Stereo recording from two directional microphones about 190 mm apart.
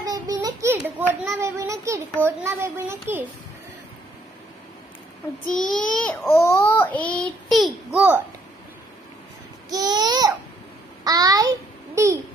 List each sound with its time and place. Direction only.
0.1 s a sound: 20° right (ahead or behind)
2.2 s speech: 10° right (ahead or behind)
5.5 s a child's voice: centre (ahead or behind)
9.7 s babbling: 20° right (ahead or behind)
11.1 s a sound: 20° right (ahead or behind)
11.9 s babbling: 15° right (ahead or behind)